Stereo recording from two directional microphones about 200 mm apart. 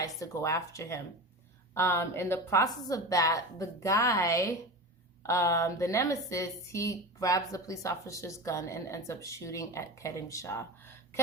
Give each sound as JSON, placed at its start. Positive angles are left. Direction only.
{"t": 0.0, "sound": "a woman's voice", "side_deg": 15}